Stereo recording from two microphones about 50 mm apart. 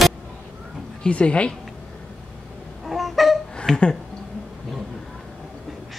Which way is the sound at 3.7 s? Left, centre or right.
Centre.